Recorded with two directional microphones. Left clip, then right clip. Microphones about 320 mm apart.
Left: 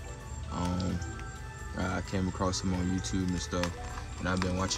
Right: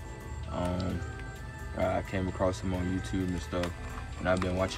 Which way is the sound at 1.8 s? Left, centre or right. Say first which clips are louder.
Right 4 dB; centre.